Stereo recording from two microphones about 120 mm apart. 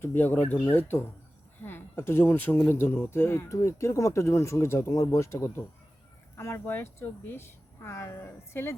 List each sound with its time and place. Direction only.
0.0 s speech: 15° left (ahead or behind)